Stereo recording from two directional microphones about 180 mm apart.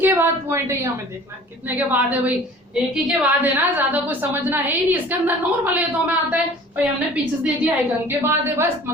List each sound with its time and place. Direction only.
0.0 s a woman's voice: 10° right (ahead or behind)